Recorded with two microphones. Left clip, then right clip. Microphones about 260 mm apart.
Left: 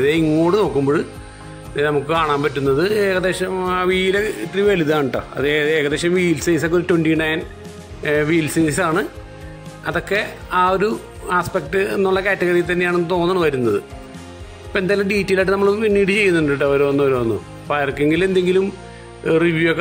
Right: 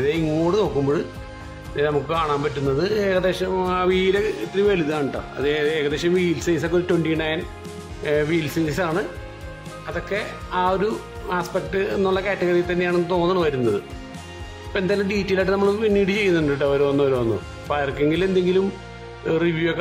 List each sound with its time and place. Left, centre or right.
0.5 s speech: centre